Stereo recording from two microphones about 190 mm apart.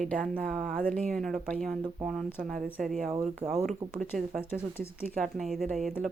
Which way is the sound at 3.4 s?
15° right (ahead or behind).